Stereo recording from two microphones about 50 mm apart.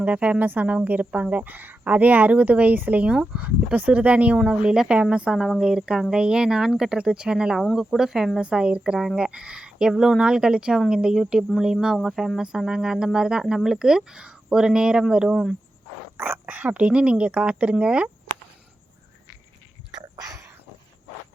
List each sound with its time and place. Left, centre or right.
0.0 s speech: right
4.7 s a woman's voice: centre
8.4 s a woman's voice: right
16.1 s speech: right